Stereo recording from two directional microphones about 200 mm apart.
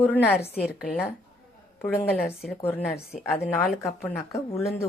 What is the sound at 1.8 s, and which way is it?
Speech, 10° left (ahead or behind).